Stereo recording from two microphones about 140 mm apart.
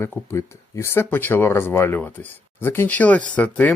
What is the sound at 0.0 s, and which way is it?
Speech, 20° left (ahead or behind).